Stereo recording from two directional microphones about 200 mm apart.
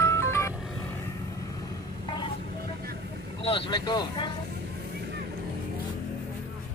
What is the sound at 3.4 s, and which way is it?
Vehicle, 25° left (ahead or behind).